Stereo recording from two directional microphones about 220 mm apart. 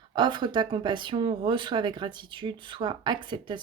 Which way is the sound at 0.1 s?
20° right (ahead or behind).